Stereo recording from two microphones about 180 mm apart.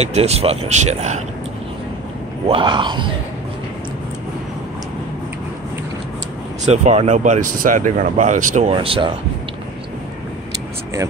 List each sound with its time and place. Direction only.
0.0 s speech: 35° right (ahead or behind)
2.4 s speech: 30° right (ahead or behind)
6.6 s speech: 40° right (ahead or behind)
8.7 s speech: 30° right (ahead or behind)